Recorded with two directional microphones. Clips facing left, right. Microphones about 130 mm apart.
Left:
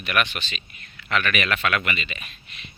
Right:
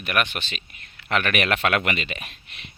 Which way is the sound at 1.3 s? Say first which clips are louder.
Right 3 dB; 60° right (ahead or behind).